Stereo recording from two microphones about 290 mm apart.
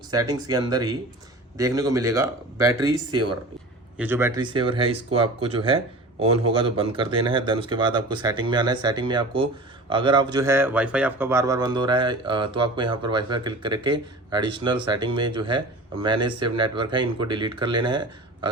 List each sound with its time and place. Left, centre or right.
0.1 s a man's voice: centre
3.1 s speech: right
3.9 s a man's voice: centre